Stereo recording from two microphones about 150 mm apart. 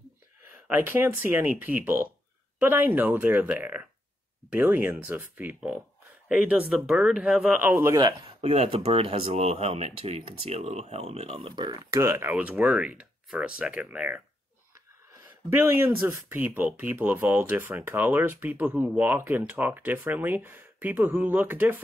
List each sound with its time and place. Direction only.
0.7 s speech: 15° right (ahead or behind)
7.7 s speech: 20° right (ahead or behind)
8.4 s speech: 40° right (ahead or behind)
11.3 s speech: 30° right (ahead or behind); by 14.2 s 10° right (ahead or behind)
15.5 s speech: 15° right (ahead or behind)